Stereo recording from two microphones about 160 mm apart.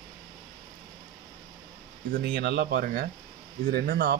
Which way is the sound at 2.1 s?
90° right.